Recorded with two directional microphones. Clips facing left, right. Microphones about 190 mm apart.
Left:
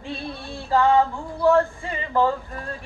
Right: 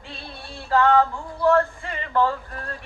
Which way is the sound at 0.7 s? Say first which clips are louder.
Even; 20° left (ahead or behind).